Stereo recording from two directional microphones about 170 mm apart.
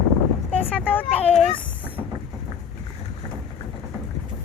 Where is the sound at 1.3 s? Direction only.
35° left (ahead or behind).